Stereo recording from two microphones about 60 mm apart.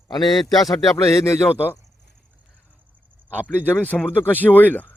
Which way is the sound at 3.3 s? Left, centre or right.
Left.